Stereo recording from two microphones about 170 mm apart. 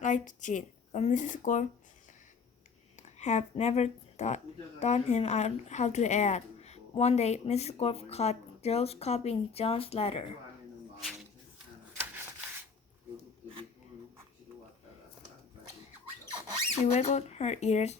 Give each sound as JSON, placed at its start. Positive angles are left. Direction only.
{"t": 0.0, "sound": "speech", "side_deg": 45}
{"t": 2.9, "sound": "speech", "side_deg": 45}
{"t": 16.8, "sound": "speech", "side_deg": 40}